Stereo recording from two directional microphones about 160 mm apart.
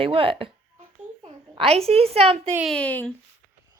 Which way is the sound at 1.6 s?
40° right (ahead or behind).